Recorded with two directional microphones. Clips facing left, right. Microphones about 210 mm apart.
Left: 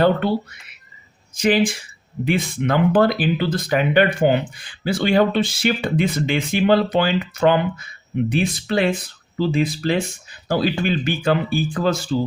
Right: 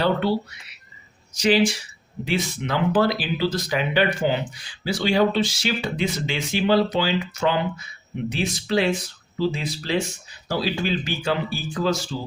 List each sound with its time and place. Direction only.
0.0 s speech: 50° left (ahead or behind)
1.4 s speech: 50° left (ahead or behind)